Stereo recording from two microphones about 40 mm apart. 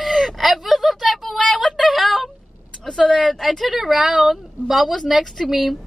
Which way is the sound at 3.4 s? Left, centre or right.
Centre.